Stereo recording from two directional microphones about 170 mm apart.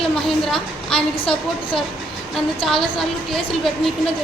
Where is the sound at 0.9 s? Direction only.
30° left (ahead or behind).